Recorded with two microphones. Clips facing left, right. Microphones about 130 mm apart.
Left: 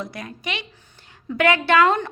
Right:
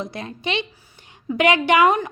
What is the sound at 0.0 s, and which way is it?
A woman's voice, 25° right (ahead or behind).